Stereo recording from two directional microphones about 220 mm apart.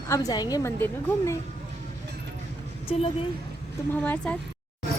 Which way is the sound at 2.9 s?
25° left (ahead or behind).